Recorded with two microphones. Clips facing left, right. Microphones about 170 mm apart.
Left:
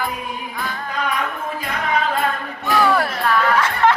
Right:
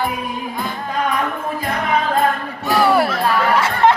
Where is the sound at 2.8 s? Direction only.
10° right (ahead or behind).